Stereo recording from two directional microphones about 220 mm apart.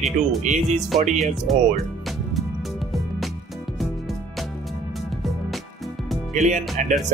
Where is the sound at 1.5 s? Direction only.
Centre (ahead or behind).